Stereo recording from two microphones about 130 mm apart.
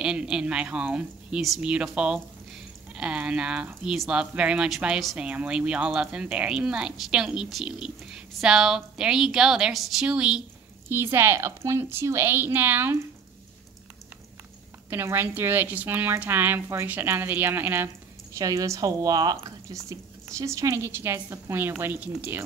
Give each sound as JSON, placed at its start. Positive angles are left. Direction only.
{"t": 0.0, "sound": "a woman's voice", "side_deg": -5}
{"t": 10.9, "sound": "a woman's voice", "side_deg": -20}
{"t": 14.9, "sound": "a woman's voice", "side_deg": -15}